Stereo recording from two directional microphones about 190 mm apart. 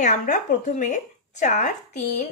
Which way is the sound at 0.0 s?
40° left (ahead or behind).